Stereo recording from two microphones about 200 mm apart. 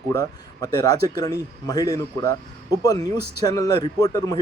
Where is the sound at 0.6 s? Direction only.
20° left (ahead or behind).